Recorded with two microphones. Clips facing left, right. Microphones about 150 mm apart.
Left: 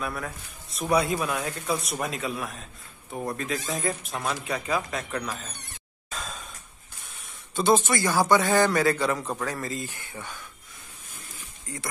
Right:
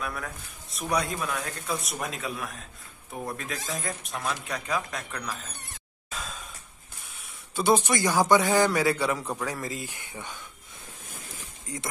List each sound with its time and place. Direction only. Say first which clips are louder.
0.0 s speech: left 2 dB; centre (ahead or behind)
6.0 s a sound: left 1 dB; 5° right (ahead or behind)
7.5 s a man's voice: left 1 dB; 10° right (ahead or behind)
11.6 s speech: right 1 dB; 20° right (ahead or behind)